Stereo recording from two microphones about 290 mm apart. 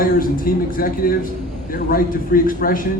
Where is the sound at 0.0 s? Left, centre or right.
Left.